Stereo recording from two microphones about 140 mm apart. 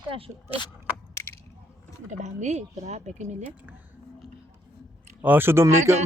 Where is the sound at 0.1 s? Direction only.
40° right (ahead or behind).